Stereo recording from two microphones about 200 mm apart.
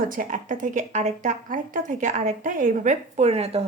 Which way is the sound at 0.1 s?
40° right (ahead or behind).